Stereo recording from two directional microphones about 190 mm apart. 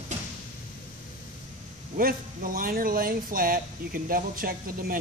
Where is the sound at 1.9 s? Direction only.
45° right (ahead or behind).